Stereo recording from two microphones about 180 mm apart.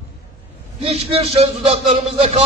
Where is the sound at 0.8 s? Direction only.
35° right (ahead or behind).